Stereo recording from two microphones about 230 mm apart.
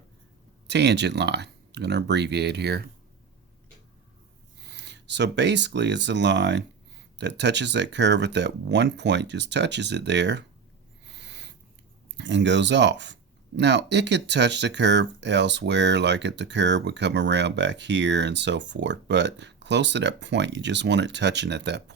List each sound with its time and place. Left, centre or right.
0.7 s speech: right
4.6 s speech: right
11.1 s owl: right
12.1 s speech: right